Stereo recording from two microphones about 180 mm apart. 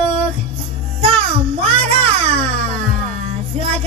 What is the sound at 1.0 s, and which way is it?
Music, 30° right (ahead or behind).